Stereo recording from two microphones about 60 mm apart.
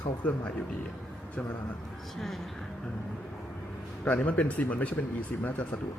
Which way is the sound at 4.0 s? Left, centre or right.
Left.